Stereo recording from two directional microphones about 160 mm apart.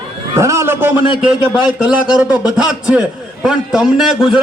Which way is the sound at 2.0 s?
25° left (ahead or behind).